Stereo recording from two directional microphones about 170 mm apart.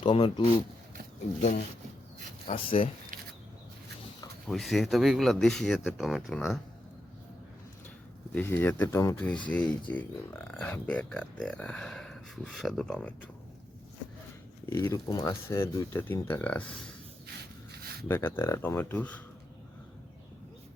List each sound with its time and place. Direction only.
0.0 s speech: 30° left (ahead or behind)
2.5 s speech: 35° left (ahead or behind)
4.4 s speech: centre (ahead or behind)
8.4 s speech: 10° left (ahead or behind)
14.7 s speech: 20° left (ahead or behind)
18.1 s speech: 15° left (ahead or behind)